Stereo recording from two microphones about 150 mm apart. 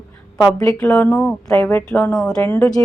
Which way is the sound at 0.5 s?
20° left (ahead or behind).